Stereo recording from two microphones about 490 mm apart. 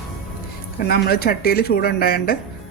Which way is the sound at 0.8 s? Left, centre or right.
Centre.